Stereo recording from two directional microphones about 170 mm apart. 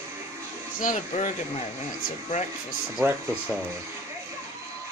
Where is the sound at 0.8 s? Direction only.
45° left (ahead or behind).